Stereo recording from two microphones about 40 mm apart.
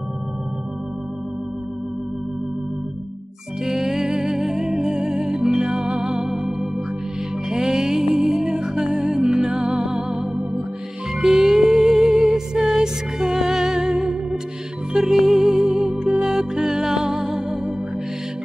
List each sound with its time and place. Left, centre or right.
3.6 s music: centre
8.8 s music: right
11.1 s music: centre
13.8 s music: right